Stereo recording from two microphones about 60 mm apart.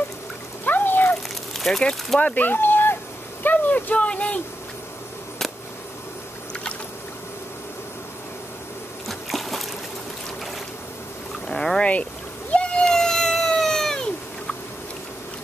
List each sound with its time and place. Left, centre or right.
0.7 s water: left
1.6 s speech: centre
2.1 s speech: left
3.4 s a sound: left
9.0 s a sound: centre
11.4 s boat: centre
11.8 s speech: left
12.5 s cat: centre